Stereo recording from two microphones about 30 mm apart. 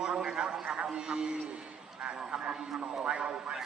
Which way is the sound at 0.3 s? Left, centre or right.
Right.